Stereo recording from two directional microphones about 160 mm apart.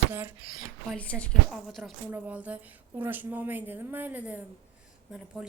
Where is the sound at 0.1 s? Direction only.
10° right (ahead or behind).